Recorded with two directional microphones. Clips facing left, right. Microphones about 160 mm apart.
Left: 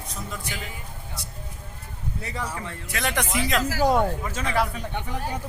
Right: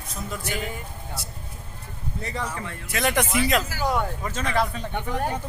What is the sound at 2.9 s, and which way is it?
Speech, 10° right (ahead or behind).